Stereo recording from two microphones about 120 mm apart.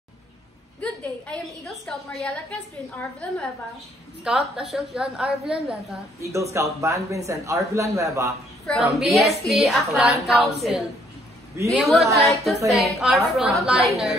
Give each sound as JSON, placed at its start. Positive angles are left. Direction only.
{"t": 0.7, "sound": "a sound", "side_deg": 10}
{"t": 1.9, "sound": "a woman's voice", "side_deg": 5}
{"t": 4.2, "sound": "a woman's voice", "side_deg": -5}
{"t": 6.2, "sound": "a man's voice", "side_deg": -25}
{"t": 8.6, "sound": "a woman's voice", "side_deg": 0}